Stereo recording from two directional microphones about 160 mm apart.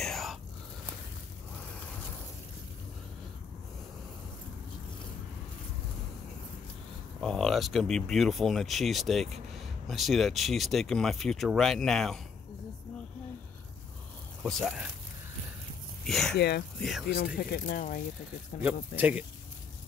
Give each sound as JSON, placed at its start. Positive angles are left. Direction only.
{"t": 0.0, "sound": "whispering", "side_deg": 0}
{"t": 7.2, "sound": "speech", "side_deg": 5}
{"t": 14.4, "sound": "speech", "side_deg": 0}
{"t": 16.1, "sound": "speech", "side_deg": 0}
{"t": 16.3, "sound": "speech", "side_deg": 90}
{"t": 17.4, "sound": "speech", "side_deg": 70}
{"t": 18.6, "sound": "speech", "side_deg": -10}